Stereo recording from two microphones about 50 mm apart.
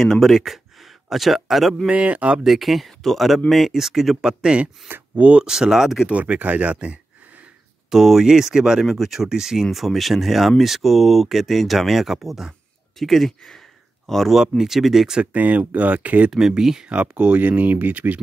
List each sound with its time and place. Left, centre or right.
0.0 s speech: centre
1.9 s speech: right
2.4 s speech: centre
4.2 s speech: centre
5.5 s speech: centre
6.0 s speech: right
7.9 s speech: centre
8.8 s speech: centre
15.3 s speech: right
16.3 s speech: centre
16.9 s speech: right